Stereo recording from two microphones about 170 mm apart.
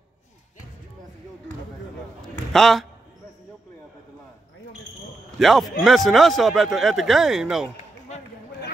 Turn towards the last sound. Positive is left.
turn(degrees=-5)  # may be behind; listen again after turning